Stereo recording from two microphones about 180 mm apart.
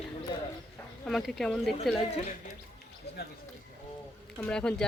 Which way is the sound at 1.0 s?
5° left (ahead or behind).